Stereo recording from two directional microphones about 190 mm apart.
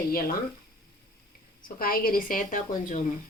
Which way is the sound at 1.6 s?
50° left (ahead or behind).